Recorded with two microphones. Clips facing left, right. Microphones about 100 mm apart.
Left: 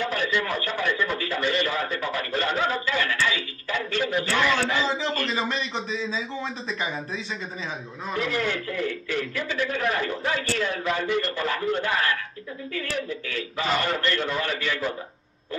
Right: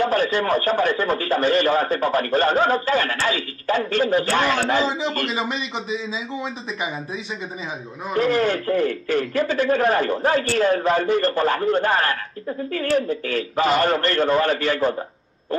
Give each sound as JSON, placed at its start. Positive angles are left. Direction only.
{"t": 0.0, "sound": "a man's voice", "side_deg": -40}
{"t": 5.3, "sound": "a man's voice", "side_deg": 0}
{"t": 8.1, "sound": "a man's voice", "side_deg": -35}